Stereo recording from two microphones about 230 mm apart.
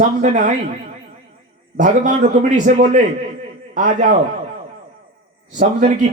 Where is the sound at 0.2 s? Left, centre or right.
Right.